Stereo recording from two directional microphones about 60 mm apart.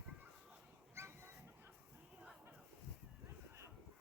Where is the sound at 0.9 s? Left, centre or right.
Right.